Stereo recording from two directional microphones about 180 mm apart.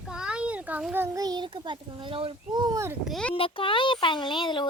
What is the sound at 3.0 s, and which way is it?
Speech, centre (ahead or behind).